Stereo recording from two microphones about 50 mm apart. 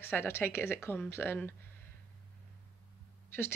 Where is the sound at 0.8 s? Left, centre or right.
Left.